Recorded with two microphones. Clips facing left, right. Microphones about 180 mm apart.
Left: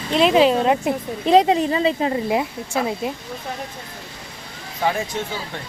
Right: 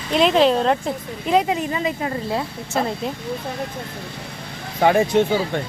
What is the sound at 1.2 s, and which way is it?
Speech, 30° left (ahead or behind).